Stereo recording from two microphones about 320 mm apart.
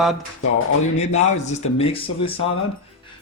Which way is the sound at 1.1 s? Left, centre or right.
Left.